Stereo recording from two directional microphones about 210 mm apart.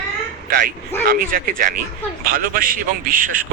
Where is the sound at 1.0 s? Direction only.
45° right (ahead or behind).